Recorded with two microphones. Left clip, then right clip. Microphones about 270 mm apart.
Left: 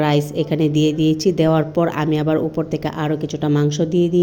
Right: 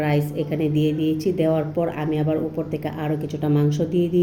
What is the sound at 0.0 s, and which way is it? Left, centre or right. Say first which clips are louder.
A woman's voice: left 5 dB; left.